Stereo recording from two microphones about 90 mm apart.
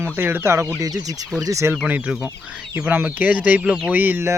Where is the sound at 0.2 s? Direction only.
25° right (ahead or behind).